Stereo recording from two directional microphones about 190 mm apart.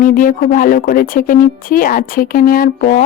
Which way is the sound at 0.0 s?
45° left (ahead or behind).